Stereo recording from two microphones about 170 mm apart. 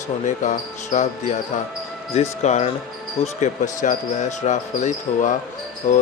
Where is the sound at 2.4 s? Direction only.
40° left (ahead or behind).